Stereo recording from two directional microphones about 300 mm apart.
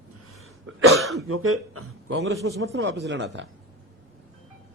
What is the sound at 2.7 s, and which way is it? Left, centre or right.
Speech, right.